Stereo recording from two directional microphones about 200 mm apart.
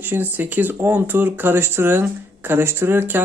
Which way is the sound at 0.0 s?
10° right (ahead or behind).